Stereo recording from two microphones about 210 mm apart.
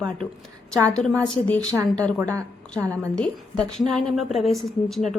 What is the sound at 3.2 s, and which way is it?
A woman's voice, centre (ahead or behind).